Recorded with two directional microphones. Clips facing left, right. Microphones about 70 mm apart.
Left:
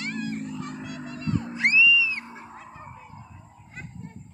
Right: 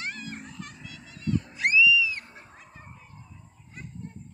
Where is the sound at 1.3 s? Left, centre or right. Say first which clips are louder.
Left 1 dB; left.